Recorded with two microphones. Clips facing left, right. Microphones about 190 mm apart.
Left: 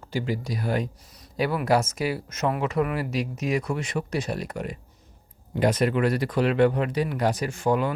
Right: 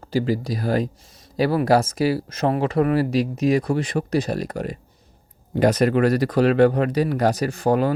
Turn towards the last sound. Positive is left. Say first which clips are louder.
# right 4 dB
turn(degrees=-35)  # may be behind; listen again after turning